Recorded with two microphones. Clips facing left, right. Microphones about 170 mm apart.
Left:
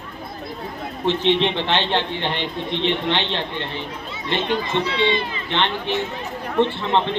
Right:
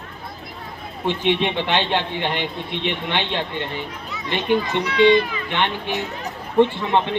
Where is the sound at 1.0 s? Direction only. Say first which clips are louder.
Left 2 dB; 15° right (ahead or behind).